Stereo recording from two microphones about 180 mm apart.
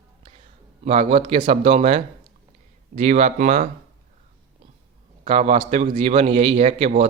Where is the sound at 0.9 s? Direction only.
35° right (ahead or behind).